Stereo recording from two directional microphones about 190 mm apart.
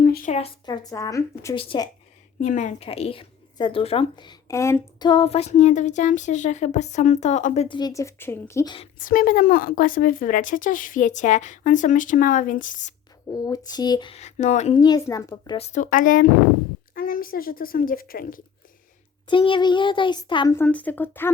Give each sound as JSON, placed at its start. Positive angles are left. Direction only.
{"t": 0.3, "sound": "speech", "side_deg": 30}
{"t": 2.4, "sound": "speech", "side_deg": 40}
{"t": 7.8, "sound": "speech", "side_deg": 20}
{"t": 9.0, "sound": "a woman's voice", "side_deg": 45}
{"t": 13.2, "sound": "speech", "side_deg": 20}
{"t": 14.8, "sound": "speech", "side_deg": 20}
{"t": 15.5, "sound": "a woman's voice", "side_deg": 35}
{"t": 19.3, "sound": "speech", "side_deg": 25}
{"t": 20.5, "sound": "speech", "side_deg": 10}